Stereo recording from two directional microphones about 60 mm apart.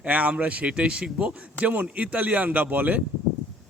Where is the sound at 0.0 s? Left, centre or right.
Right.